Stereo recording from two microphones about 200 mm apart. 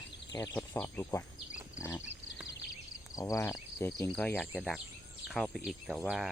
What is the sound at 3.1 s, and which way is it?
Speech, 15° left (ahead or behind).